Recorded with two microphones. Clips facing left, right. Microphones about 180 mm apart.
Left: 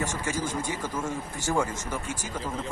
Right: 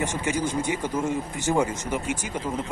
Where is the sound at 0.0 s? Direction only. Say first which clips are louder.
Right 4 dB; 20° right (ahead or behind).